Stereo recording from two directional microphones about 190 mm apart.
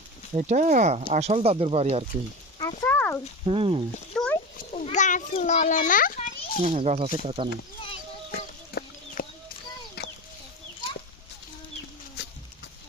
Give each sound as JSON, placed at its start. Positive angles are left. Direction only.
{"t": 0.3, "sound": "speech", "side_deg": -40}
{"t": 2.6, "sound": "a sound", "side_deg": 15}
{"t": 3.4, "sound": "speech", "side_deg": -30}
{"t": 4.1, "sound": "a sound", "side_deg": 5}
{"t": 4.7, "sound": "a child's voice", "side_deg": 40}
{"t": 6.6, "sound": "speech", "side_deg": -35}
{"t": 8.3, "sound": "chicken", "side_deg": 55}